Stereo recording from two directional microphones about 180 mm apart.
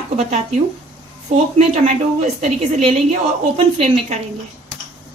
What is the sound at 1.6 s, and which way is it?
A woman's voice, 40° right (ahead or behind).